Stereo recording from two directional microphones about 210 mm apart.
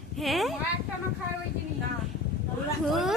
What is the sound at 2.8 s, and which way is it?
Speech, centre (ahead or behind).